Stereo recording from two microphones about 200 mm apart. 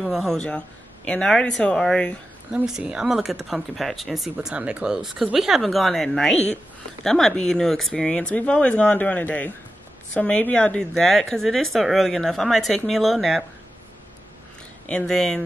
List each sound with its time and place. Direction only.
0.0 s speech: centre (ahead or behind)
6.3 s speech: 35° left (ahead or behind)
7.0 s speech: centre (ahead or behind)
14.9 s speech: 5° left (ahead or behind)